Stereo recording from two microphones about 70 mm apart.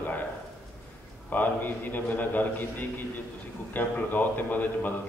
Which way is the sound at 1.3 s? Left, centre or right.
Left.